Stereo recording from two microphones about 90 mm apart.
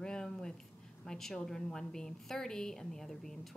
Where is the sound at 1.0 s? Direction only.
5° left (ahead or behind).